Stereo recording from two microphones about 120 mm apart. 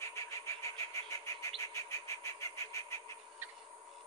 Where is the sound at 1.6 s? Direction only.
25° left (ahead or behind).